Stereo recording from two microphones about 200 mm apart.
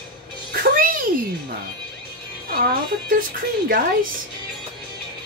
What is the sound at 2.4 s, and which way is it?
Speech, 50° right (ahead or behind).